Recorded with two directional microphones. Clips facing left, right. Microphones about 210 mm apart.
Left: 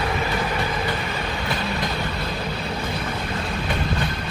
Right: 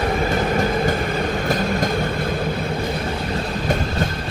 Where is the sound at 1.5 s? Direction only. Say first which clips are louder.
Right 5 dB; 45° right (ahead or behind).